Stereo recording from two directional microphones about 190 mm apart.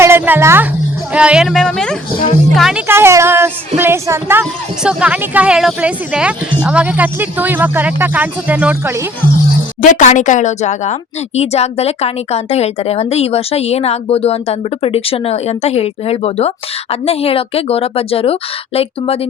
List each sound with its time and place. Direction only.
0.0 s a sound: 15° right (ahead or behind)
1.1 s a woman's voice: 5° right (ahead or behind)
9.8 s a woman's voice: 40° left (ahead or behind)